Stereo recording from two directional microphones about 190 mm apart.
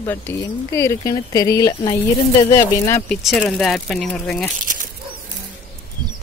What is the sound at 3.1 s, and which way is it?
Speech, centre (ahead or behind).